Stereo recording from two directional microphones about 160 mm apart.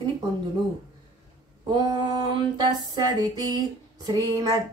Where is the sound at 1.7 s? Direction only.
25° right (ahead or behind).